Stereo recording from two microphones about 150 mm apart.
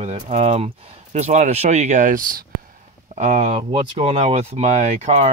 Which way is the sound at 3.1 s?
50° right (ahead or behind).